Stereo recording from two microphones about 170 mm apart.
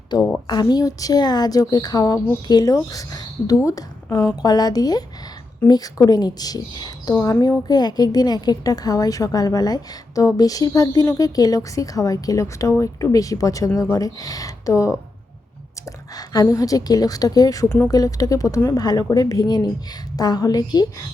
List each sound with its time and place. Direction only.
0.2 s a woman's voice: 5° left (ahead or behind)
0.4 s a woman's voice: 25° left (ahead or behind)
16.1 s a woman's voice: 20° left (ahead or behind)